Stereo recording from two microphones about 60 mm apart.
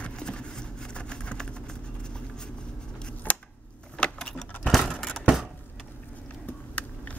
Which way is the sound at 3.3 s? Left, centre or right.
Left.